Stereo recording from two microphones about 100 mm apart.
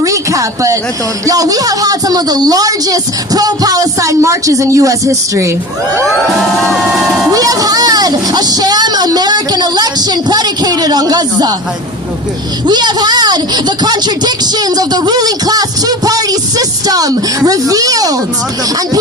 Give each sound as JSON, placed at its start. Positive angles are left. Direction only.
{"t": 0.0, "sound": "a sound", "side_deg": -35}
{"t": 1.3, "sound": "speech", "side_deg": -35}
{"t": 6.3, "sound": "music", "side_deg": 0}
{"t": 7.3, "sound": "speech", "side_deg": -35}
{"t": 12.6, "sound": "speech", "side_deg": -45}